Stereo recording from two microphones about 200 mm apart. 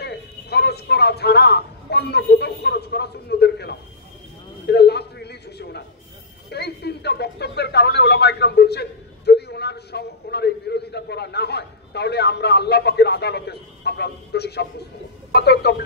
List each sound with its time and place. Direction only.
0.0 s speech: 55° left (ahead or behind)
4.6 s a sound: 55° left (ahead or behind)
6.5 s speech: 55° left (ahead or behind)